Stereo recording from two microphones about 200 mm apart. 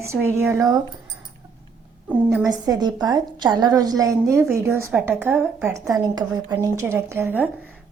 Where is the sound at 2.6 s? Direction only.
20° right (ahead or behind).